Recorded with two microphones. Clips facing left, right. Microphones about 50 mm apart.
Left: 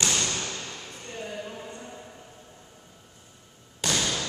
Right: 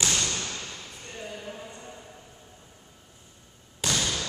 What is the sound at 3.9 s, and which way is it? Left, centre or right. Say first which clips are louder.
Thump: left 1 dB; centre.